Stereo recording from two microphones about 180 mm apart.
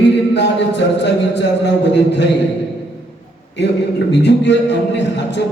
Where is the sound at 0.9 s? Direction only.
75° left (ahead or behind).